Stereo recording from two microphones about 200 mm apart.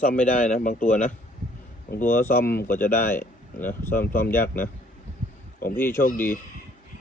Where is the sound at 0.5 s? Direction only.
40° left (ahead or behind).